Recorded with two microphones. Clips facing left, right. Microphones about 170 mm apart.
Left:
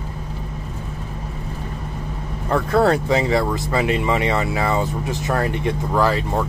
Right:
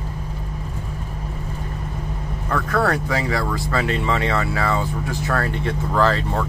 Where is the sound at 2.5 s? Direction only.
25° left (ahead or behind).